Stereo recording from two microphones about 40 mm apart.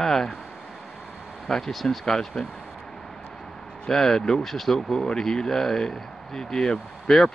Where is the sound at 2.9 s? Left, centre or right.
Centre.